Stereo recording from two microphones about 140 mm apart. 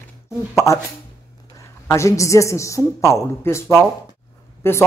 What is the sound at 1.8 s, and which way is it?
A woman's voice, 20° left (ahead or behind).